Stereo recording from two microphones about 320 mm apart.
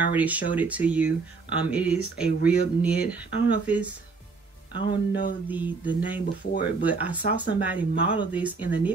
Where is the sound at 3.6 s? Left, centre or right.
Centre.